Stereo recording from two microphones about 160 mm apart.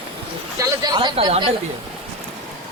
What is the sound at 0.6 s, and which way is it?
Speech, 25° right (ahead or behind).